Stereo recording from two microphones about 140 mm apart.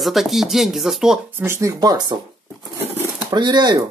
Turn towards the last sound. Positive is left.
turn(degrees=-30)  # may be behind; listen again after turning